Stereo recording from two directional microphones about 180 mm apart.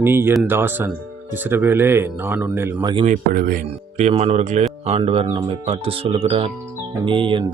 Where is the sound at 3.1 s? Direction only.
50° right (ahead or behind).